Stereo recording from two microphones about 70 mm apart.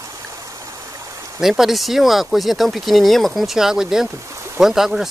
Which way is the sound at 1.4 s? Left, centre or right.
Centre.